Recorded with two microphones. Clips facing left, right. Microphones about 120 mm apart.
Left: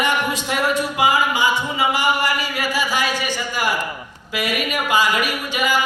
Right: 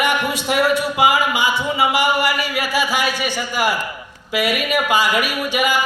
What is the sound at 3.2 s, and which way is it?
A woman's voice, 15° right (ahead or behind).